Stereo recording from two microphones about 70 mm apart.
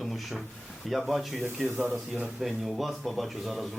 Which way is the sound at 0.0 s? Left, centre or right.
Centre.